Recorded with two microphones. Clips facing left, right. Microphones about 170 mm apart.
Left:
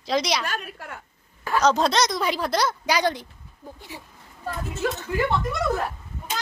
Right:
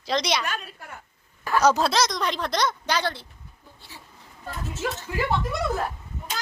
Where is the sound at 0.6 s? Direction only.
65° left (ahead or behind).